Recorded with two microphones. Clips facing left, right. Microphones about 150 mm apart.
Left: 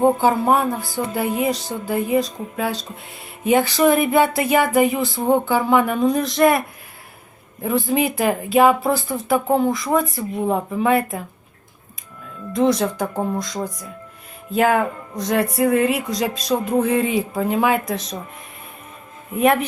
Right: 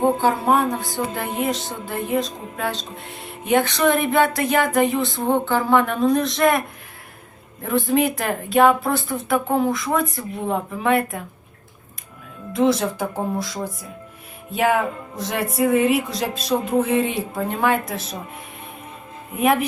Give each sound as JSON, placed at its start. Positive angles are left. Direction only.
{"t": 0.0, "sound": "speech", "side_deg": 5}
{"t": 7.6, "sound": "speech", "side_deg": 0}
{"t": 12.5, "sound": "speech", "side_deg": -5}
{"t": 19.3, "sound": "speech", "side_deg": 0}